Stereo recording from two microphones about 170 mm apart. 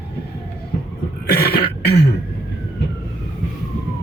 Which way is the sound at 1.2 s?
70° left (ahead or behind).